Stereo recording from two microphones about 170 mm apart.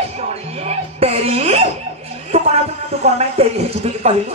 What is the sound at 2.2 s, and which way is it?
A man's voice, 40° right (ahead or behind).